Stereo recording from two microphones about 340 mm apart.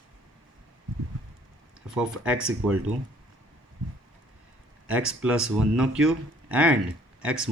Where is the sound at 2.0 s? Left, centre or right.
Centre.